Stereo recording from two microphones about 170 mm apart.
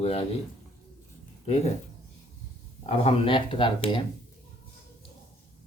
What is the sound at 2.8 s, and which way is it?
Speech, 35° left (ahead or behind).